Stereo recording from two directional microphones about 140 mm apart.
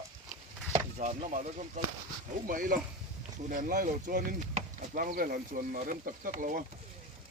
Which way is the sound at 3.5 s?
70° right (ahead or behind).